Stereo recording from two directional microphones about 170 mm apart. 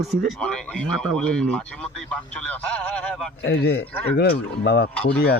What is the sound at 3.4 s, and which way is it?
Speech, 75° left (ahead or behind).